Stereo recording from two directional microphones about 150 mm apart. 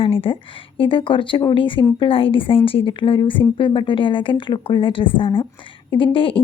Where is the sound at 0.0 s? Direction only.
40° left (ahead or behind).